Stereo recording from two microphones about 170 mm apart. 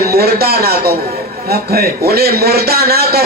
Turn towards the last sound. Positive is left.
turn(degrees=-65)  # may be behind; listen again after turning